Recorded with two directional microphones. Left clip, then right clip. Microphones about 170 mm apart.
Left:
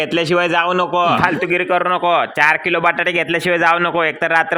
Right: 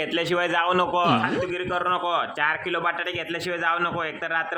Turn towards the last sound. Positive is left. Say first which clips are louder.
# left 11 dB
turn(degrees=35)  # may be behind; listen again after turning